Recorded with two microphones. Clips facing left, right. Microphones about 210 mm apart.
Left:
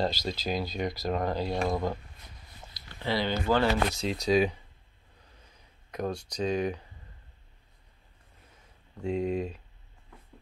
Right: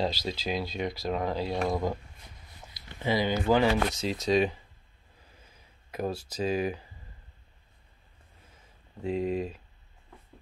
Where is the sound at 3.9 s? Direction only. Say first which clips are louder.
Even; centre (ahead or behind).